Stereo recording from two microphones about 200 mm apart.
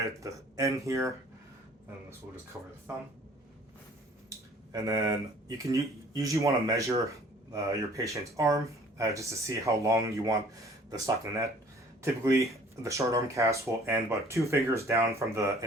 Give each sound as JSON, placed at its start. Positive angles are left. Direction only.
{"t": 0.0, "sound": "speech", "side_deg": -15}
{"t": 4.3, "sound": "speech", "side_deg": -15}